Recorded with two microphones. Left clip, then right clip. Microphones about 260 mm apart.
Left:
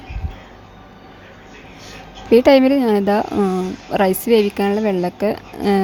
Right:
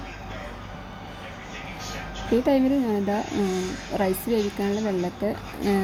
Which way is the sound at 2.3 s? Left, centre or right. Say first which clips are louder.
Left 11 dB; left.